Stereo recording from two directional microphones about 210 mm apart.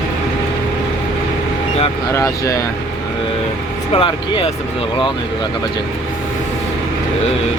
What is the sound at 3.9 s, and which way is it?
Speech, 25° left (ahead or behind).